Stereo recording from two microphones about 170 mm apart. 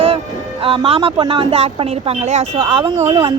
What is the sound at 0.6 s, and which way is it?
Speech, 30° right (ahead or behind).